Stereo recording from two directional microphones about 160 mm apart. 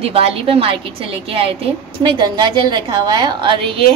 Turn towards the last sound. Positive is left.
turn(degrees=-35)  # may be behind; listen again after turning